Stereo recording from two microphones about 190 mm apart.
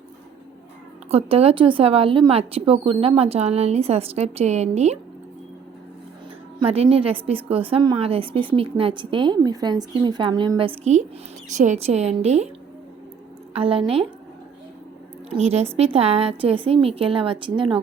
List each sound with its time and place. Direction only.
1.1 s a woman's voice: 30° right (ahead or behind)
6.6 s a woman's voice: 30° right (ahead or behind)
13.5 s a woman's voice: 30° right (ahead or behind)
15.4 s a woman's voice: 35° right (ahead or behind)